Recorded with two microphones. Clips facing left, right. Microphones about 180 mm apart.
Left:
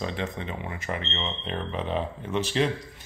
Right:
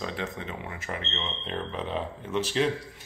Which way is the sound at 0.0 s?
Centre (ahead or behind).